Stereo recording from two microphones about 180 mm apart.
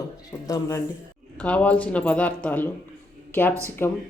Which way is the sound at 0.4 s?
20° left (ahead or behind).